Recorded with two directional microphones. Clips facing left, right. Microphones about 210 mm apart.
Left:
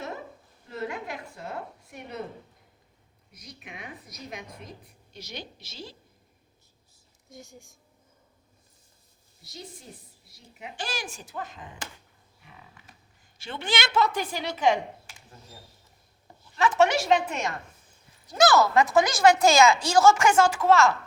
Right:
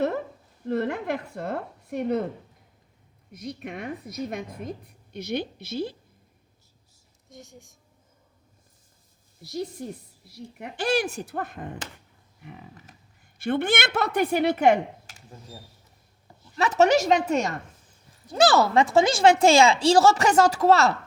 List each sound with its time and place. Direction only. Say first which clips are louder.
0.7 s a woman's voice: right 8 dB; 60° right (ahead or behind)
3.4 s a woman's voice: right 10 dB; 50° right (ahead or behind)
7.3 s speech: even; centre (ahead or behind)
10.6 s a woman's voice: right 11 dB; 60° right (ahead or behind)
13.4 s a woman's voice: right 7 dB; 55° right (ahead or behind)
16.6 s a woman's voice: right 3 dB; 40° right (ahead or behind)